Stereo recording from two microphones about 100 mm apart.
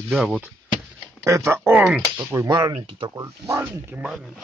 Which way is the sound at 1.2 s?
30° right (ahead or behind).